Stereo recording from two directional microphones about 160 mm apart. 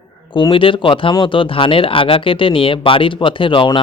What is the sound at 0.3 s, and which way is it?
Speech, 30° left (ahead or behind).